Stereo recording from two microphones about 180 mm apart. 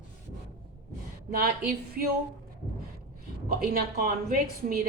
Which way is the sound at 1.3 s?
55° right (ahead or behind).